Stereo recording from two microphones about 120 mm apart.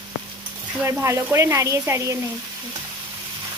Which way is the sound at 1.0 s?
25° right (ahead or behind).